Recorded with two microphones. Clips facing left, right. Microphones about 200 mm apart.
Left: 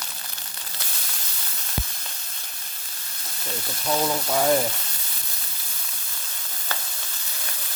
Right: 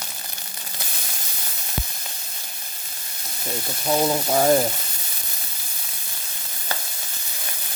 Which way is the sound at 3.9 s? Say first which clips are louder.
Right 3 dB; 20° right (ahead or behind).